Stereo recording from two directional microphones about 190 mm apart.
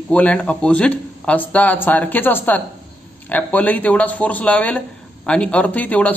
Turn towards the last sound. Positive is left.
turn(degrees=10)  # may be behind; listen again after turning